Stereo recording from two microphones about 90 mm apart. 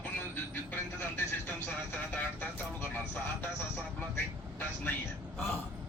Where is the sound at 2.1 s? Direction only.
15° left (ahead or behind).